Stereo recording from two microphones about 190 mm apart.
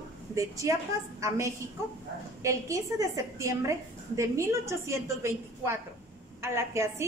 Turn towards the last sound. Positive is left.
turn(degrees=-15)  # may be behind; listen again after turning